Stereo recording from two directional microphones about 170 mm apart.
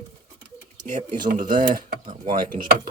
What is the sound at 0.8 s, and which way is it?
Speech, 45° right (ahead or behind).